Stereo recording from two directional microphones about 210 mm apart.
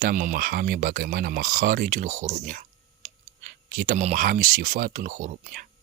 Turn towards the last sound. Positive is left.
turn(degrees=-40)  # may be behind; listen again after turning